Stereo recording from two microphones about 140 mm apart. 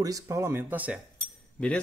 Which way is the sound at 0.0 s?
25° right (ahead or behind).